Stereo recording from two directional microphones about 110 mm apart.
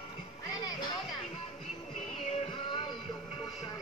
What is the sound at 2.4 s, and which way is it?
Music, 45° left (ahead or behind).